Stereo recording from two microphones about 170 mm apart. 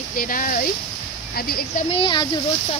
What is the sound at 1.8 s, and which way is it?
Speech, 35° left (ahead or behind).